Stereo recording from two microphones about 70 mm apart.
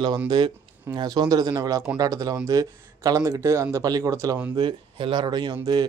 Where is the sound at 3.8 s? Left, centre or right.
Right.